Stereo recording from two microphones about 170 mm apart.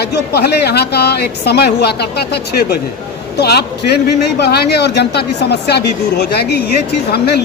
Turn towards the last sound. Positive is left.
turn(degrees=70)  # may be behind; listen again after turning